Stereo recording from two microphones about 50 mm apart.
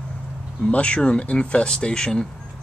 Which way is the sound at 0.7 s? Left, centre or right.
Left.